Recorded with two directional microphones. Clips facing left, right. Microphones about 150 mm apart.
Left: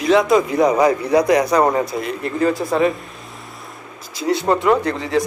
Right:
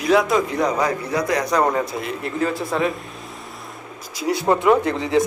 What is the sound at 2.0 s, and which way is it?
Speech, centre (ahead or behind).